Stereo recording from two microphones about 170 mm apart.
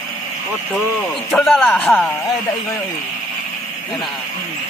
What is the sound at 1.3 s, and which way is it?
Speech, centre (ahead or behind).